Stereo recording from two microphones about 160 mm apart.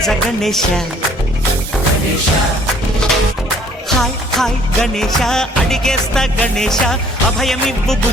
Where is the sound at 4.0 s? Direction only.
Centre (ahead or behind).